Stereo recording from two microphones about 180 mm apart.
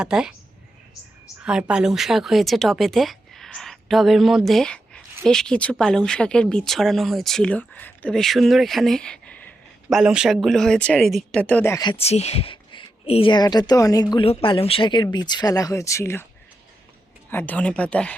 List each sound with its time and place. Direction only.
0.0 s speech: 5° right (ahead or behind)
1.4 s speech: 5° right (ahead or behind)
9.9 s speech: 5° right (ahead or behind); by 16.2 s 15° left (ahead or behind)
17.3 s speech: 10° left (ahead or behind)